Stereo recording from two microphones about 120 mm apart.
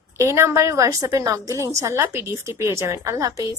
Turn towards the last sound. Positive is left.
turn(degrees=-25)  # may be behind; listen again after turning